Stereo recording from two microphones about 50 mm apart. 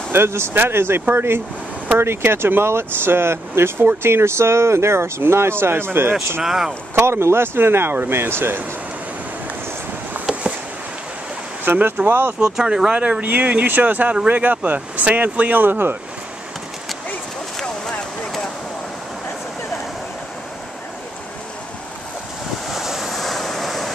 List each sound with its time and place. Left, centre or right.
0.1 s speech: right
6.4 s speech: centre
7.0 s speech: right
11.6 s speech: right
12.4 s speech: centre
13.2 s speech: right
22.7 s vehicle: centre